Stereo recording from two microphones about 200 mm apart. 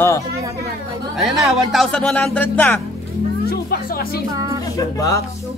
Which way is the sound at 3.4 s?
50° left (ahead or behind).